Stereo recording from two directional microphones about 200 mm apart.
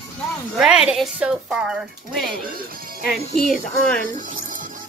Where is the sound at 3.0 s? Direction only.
50° left (ahead or behind).